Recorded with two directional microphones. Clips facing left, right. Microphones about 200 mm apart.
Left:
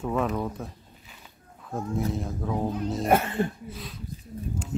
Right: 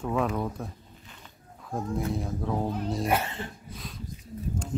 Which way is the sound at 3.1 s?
50° left (ahead or behind).